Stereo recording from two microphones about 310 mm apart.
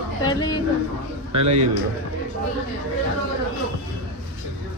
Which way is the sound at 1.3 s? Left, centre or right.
Right.